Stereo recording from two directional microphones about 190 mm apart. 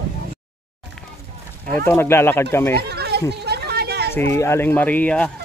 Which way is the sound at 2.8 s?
60° right (ahead or behind).